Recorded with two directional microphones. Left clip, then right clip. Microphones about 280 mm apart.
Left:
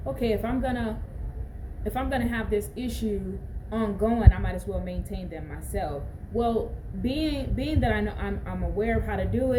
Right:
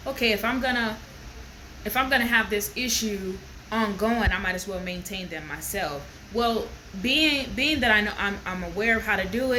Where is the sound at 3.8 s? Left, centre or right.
Right.